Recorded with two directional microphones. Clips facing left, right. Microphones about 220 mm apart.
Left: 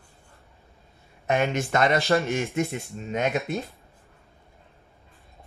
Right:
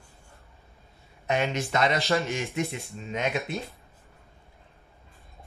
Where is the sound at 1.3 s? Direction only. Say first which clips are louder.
Left 3 dB; 50° left (ahead or behind).